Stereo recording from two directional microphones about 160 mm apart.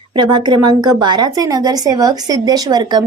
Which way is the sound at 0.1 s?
30° right (ahead or behind).